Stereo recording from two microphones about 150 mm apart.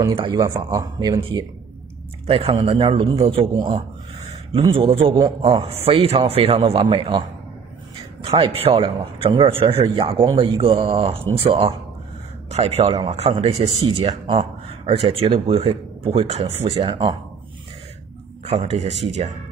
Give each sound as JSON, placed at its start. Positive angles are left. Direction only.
{"t": 0.1, "sound": "speech", "side_deg": -35}
{"t": 2.2, "sound": "speech", "side_deg": -40}
{"t": 18.4, "sound": "speech", "side_deg": -45}